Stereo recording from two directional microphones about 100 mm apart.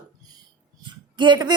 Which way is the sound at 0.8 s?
50° right (ahead or behind).